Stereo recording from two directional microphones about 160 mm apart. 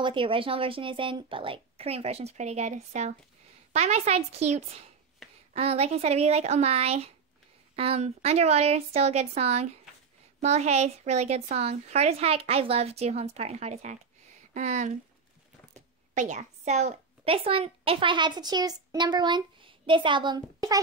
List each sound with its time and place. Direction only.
0.0 s a woman's voice: 30° right (ahead or behind)
16.2 s a woman's voice: 45° right (ahead or behind); by 20.8 s 25° right (ahead or behind)